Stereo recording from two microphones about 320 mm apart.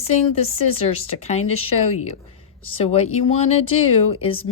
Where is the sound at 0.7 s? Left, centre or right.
Centre.